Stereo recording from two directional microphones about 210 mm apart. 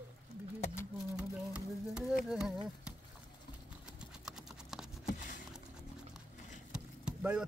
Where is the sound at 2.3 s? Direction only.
5° right (ahead or behind).